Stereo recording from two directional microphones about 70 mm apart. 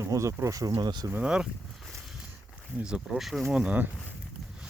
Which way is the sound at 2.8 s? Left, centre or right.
Centre.